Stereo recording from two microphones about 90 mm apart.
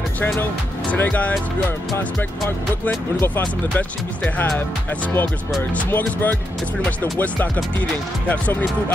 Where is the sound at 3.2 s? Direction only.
20° left (ahead or behind).